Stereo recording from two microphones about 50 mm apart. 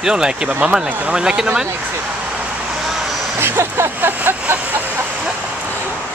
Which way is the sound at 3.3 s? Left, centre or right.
Right.